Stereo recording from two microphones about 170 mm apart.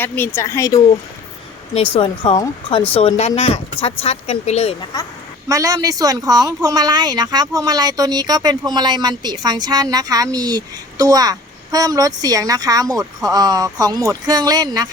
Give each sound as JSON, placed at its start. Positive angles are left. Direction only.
{"t": 0.0, "sound": "speech", "side_deg": 15}
{"t": 1.7, "sound": "speech", "side_deg": 35}
{"t": 4.9, "sound": "a woman's voice", "side_deg": 20}
{"t": 5.5, "sound": "speech", "side_deg": -20}